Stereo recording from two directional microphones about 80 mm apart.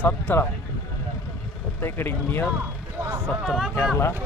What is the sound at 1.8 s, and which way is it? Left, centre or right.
Speech, left.